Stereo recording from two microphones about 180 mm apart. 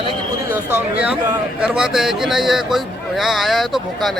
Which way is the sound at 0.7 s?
5° right (ahead or behind).